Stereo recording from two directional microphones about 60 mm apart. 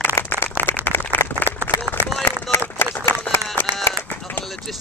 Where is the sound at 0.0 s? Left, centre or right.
Left.